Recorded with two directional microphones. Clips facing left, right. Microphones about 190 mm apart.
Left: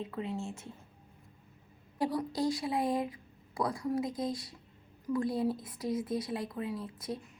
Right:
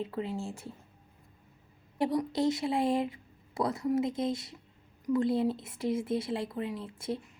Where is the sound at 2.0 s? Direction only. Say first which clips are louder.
Right 3 dB; 25° right (ahead or behind).